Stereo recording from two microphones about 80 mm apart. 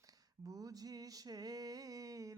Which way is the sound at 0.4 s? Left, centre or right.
Right.